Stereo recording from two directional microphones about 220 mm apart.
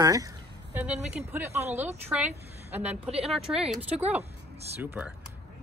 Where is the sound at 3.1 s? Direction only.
25° right (ahead or behind).